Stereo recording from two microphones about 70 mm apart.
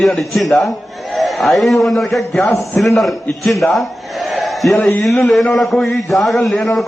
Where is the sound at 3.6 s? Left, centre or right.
Centre.